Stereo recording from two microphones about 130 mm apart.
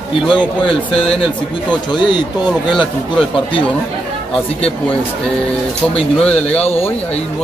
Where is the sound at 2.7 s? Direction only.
5° left (ahead or behind).